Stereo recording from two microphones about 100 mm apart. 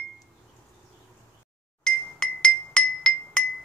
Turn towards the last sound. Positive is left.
turn(degrees=10)  # may be behind; listen again after turning